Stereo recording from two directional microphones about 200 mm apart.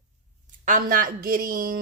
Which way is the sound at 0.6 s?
40° right (ahead or behind).